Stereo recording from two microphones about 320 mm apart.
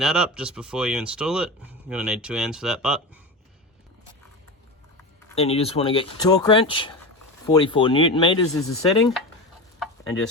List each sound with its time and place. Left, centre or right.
0.0 s speech: centre
5.3 s speech: centre